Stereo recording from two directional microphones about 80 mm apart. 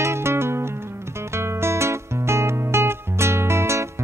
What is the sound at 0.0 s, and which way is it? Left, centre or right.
Music, right.